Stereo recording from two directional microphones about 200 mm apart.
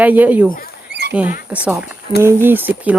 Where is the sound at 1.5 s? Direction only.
5° right (ahead or behind).